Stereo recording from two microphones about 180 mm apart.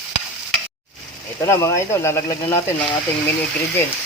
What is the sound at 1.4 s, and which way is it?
Speech, 15° left (ahead or behind).